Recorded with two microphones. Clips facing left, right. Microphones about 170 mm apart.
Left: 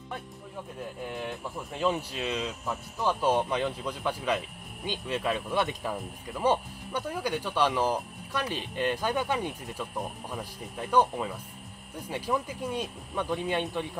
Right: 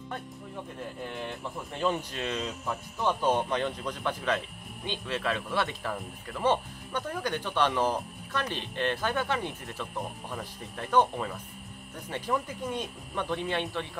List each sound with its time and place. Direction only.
1.0 s speech: 5° left (ahead or behind)